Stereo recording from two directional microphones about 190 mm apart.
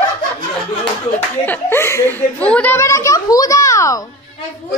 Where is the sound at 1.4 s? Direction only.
10° left (ahead or behind).